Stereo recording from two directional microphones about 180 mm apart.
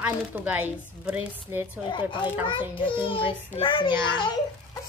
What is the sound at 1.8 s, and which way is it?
A child's voice, 25° left (ahead or behind).